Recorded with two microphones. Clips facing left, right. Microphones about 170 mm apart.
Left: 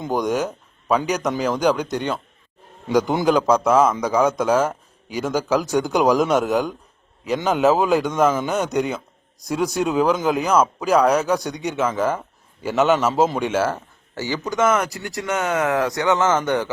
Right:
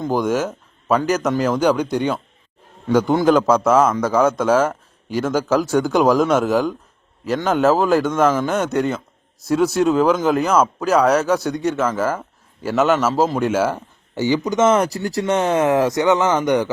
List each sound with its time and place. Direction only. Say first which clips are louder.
0.0 s a man's voice: right 2 dB; centre (ahead or behind)